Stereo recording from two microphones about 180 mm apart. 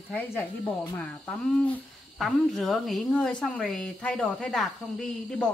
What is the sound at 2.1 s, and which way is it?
Speech, centre (ahead or behind).